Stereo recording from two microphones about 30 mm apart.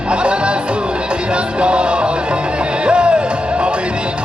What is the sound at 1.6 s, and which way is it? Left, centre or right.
Speech, right.